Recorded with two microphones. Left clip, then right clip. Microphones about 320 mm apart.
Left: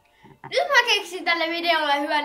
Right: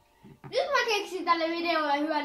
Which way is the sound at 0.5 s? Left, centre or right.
Left.